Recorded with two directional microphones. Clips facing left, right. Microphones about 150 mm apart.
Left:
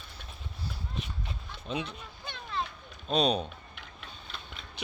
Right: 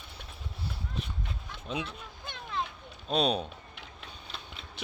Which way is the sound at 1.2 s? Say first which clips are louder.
Even; centre (ahead or behind).